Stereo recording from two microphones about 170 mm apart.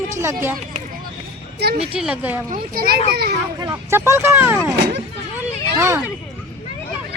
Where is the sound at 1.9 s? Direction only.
5° right (ahead or behind).